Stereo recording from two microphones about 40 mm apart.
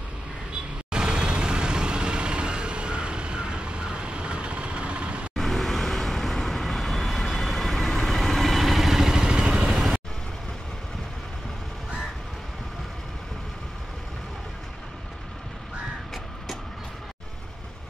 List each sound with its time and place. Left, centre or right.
0.9 s vehicle: right
5.3 s vehicle: centre